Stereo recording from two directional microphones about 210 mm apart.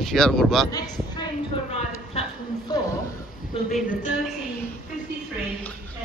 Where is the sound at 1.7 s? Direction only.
30° left (ahead or behind).